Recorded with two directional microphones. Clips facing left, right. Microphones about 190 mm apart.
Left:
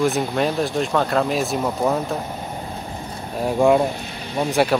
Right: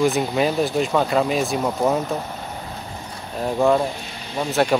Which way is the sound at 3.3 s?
10° left (ahead or behind).